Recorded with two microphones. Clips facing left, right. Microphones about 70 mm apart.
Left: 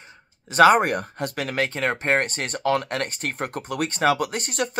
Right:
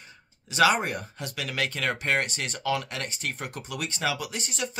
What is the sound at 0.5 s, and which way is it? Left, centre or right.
Speech, left.